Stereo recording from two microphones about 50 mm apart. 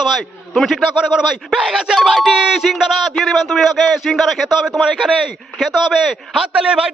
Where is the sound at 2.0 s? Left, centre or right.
Centre.